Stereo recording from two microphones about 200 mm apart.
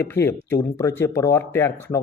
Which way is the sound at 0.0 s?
10° left (ahead or behind).